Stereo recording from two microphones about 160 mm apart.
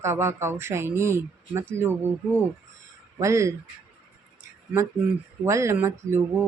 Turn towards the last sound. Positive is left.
turn(degrees=-15)  # may be behind; listen again after turning